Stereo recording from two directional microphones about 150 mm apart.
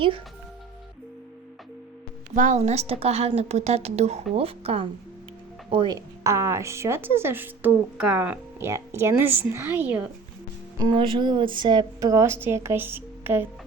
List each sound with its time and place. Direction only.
2.3 s a woman's voice: 55° right (ahead or behind); by 6.0 s 30° right (ahead or behind)
6.2 s a woman's voice: 20° right (ahead or behind)
10.8 s a woman's voice: 30° right (ahead or behind); by 13.5 s 15° right (ahead or behind)